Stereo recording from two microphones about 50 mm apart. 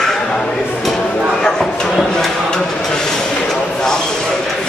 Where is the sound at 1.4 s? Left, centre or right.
Centre.